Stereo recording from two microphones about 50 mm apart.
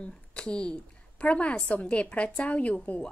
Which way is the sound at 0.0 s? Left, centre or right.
Centre.